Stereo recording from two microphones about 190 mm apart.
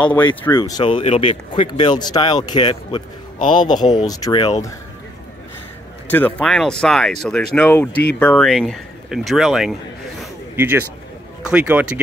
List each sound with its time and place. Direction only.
0.6 s speech: 20° left (ahead or behind)
3.3 s a man's voice: 45° left (ahead or behind)
3.6 s speech: 20° left (ahead or behind)
6.0 s speech: 10° left (ahead or behind)
10.5 s speech: 10° right (ahead or behind)